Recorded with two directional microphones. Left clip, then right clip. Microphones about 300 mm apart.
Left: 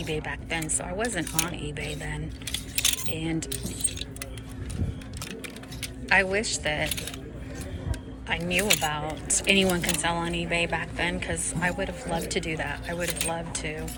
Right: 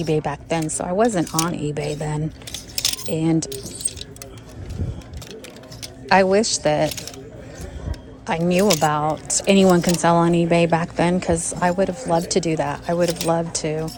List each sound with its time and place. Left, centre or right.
0.0 s a woman's voice: centre
6.1 s a woman's voice: centre
8.3 s a woman's voice: centre